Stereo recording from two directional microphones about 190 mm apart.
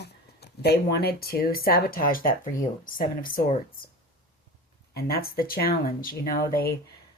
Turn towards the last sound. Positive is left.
turn(degrees=50)  # may be behind; listen again after turning